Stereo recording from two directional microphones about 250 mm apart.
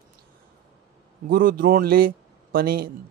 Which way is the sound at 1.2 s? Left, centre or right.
Right.